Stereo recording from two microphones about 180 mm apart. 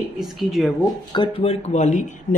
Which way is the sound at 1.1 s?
30° left (ahead or behind).